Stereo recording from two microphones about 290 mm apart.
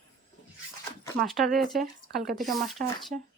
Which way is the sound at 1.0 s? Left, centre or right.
Centre.